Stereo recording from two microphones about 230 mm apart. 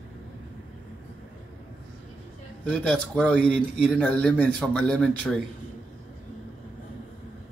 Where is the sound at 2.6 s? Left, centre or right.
Centre.